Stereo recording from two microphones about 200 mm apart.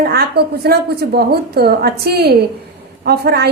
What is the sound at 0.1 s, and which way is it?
A woman's voice, 50° right (ahead or behind).